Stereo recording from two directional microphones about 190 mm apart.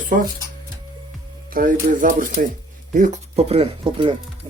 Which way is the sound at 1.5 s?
45° right (ahead or behind).